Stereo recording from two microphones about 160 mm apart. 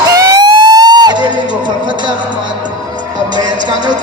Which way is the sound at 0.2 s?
25° right (ahead or behind).